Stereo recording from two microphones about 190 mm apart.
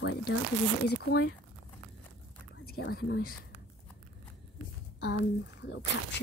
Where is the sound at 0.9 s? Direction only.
60° left (ahead or behind).